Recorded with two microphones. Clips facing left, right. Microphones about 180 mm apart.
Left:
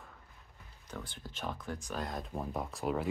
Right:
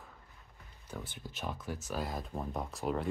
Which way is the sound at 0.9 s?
10° right (ahead or behind).